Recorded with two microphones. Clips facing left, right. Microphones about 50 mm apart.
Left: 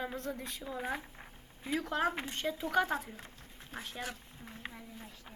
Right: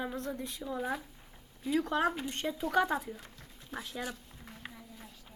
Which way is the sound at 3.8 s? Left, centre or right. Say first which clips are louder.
Right 1 dB; left.